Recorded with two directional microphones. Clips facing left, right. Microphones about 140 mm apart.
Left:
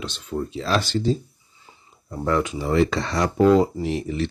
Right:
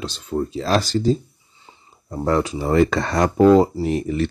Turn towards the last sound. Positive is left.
turn(degrees=-50)  # may be behind; listen again after turning